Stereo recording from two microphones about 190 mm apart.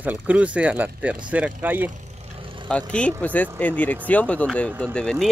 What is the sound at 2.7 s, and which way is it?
Speech, 5° left (ahead or behind).